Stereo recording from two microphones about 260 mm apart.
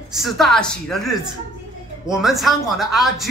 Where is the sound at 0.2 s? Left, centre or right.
Centre.